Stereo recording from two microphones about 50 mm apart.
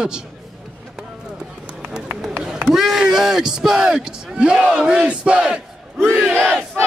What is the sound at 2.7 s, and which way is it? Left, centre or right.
A man's voice, centre.